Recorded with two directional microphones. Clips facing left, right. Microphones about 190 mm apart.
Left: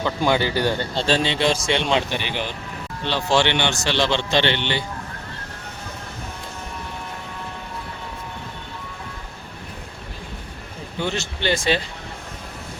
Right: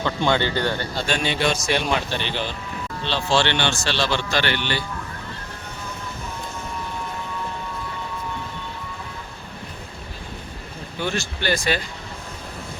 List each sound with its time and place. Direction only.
0.0 s speech: 10° left (ahead or behind)
0.9 s a man's voice: 30° left (ahead or behind)
11.0 s a man's voice: 20° left (ahead or behind)